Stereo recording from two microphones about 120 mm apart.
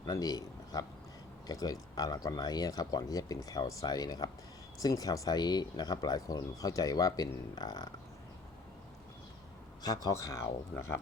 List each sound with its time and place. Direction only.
0.0 s a man's voice: 30° left (ahead or behind)
9.8 s speech: 30° left (ahead or behind)